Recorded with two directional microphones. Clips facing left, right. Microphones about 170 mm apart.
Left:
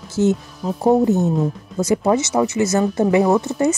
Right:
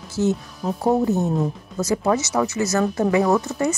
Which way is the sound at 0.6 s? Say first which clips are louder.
Left 1 dB; centre (ahead or behind).